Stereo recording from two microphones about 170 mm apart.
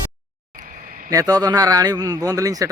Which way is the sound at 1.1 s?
20° right (ahead or behind).